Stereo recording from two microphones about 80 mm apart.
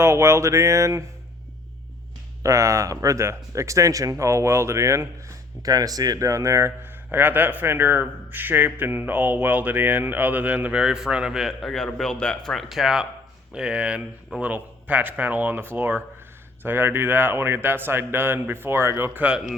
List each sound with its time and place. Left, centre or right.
0.0 s speech: right
2.4 s speech: right
5.6 s a man's voice: right; by 12.5 s centre
12.5 s a man's voice: centre